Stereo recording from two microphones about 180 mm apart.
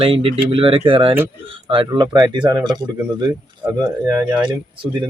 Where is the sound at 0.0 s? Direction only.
30° right (ahead or behind).